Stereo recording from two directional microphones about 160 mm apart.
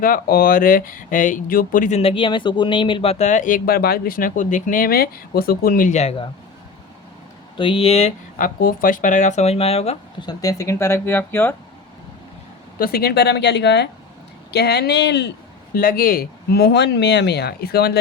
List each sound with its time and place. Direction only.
0.0 s speech: 65° left (ahead or behind)
2.0 s speech: 35° left (ahead or behind)
7.6 s speech: 35° left (ahead or behind)
8.4 s speech: 60° left (ahead or behind); by 10.0 s 40° left (ahead or behind)
10.2 s speech: 25° left (ahead or behind)
12.8 s speech: 75° left (ahead or behind); by 15.3 s 90° left
15.7 s speech: 65° left (ahead or behind); by 18.0 s 90° left